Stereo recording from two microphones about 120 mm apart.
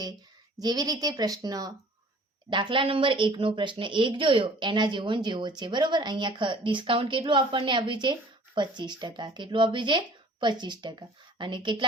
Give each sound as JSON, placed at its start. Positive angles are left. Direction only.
{"t": 0.6, "sound": "speech", "side_deg": -35}
{"t": 2.5, "sound": "speech", "side_deg": -40}